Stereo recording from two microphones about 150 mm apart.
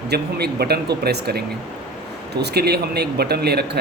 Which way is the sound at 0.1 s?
90° right.